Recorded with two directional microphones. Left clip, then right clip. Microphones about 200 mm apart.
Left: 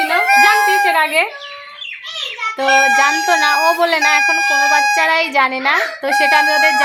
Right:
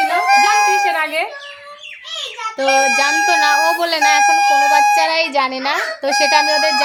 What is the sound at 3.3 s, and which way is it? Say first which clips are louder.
Speech: even; 5° left (ahead or behind).